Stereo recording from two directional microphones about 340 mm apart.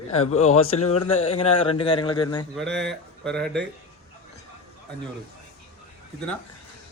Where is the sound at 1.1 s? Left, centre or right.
Centre.